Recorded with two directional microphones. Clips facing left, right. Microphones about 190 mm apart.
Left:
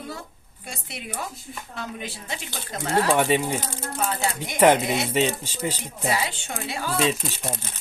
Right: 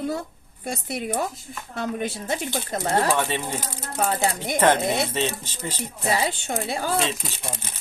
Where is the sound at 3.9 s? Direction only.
40° right (ahead or behind).